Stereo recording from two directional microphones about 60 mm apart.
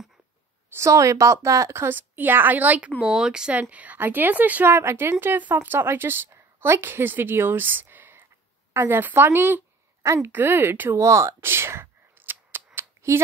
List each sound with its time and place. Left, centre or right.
0.7 s a woman's voice: right
1.8 s a woman's voice: right
3.0 s speech: centre
3.7 s speech: right
4.6 s speech: right
5.2 s a woman's voice: right
11.0 s a sound: right
13.1 s a woman's voice: right